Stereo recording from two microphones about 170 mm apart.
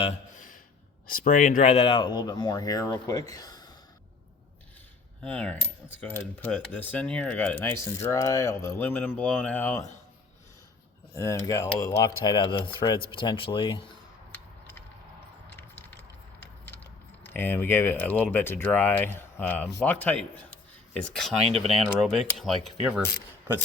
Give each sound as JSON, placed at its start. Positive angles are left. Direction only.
{"t": 1.0, "sound": "speech", "side_deg": 55}
{"t": 3.3, "sound": "gasp", "side_deg": 25}
{"t": 5.2, "sound": "speech", "side_deg": 5}
{"t": 11.1, "sound": "speech", "side_deg": 15}
{"t": 15.5, "sound": "a sound", "side_deg": 10}
{"t": 19.8, "sound": "speech", "side_deg": 10}
{"t": 21.4, "sound": "speech", "side_deg": -35}
{"t": 21.8, "sound": "speech", "side_deg": 0}